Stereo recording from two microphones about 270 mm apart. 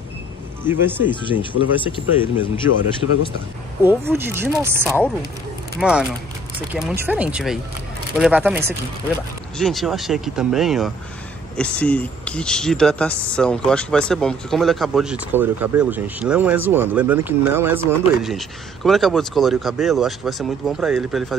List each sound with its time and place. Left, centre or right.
0.7 s speech: centre
1.4 s speech: centre
3.8 s speech: centre
4.8 s speech: centre
9.6 s speech: centre